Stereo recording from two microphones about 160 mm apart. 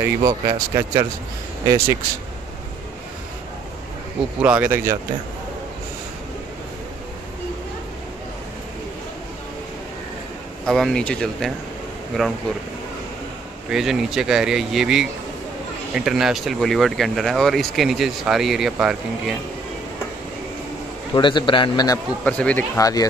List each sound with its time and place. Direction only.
0.0 s speech: 25° right (ahead or behind)
4.4 s speech: 10° right (ahead or behind)
10.6 s speech: 5° left (ahead or behind)
13.7 s speech: centre (ahead or behind)
21.1 s a man's voice: 30° left (ahead or behind)
22.2 s speech: 10° left (ahead or behind)
22.8 s a man's voice: 20° left (ahead or behind)